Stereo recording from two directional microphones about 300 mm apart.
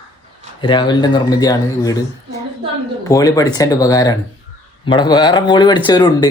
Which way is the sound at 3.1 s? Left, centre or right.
Centre.